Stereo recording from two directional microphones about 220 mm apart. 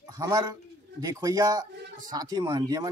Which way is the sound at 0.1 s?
15° right (ahead or behind).